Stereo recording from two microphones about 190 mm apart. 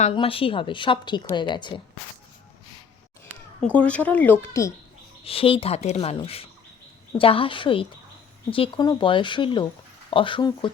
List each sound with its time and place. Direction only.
0.0 s a woman's voice: 30° left (ahead or behind)
3.6 s speech: 5° left (ahead or behind)
5.2 s a woman's voice: 30° left (ahead or behind)